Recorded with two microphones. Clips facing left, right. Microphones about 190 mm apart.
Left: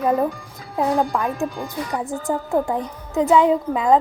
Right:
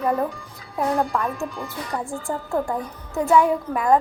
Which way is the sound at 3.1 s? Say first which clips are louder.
Left 3 dB; 20° left (ahead or behind).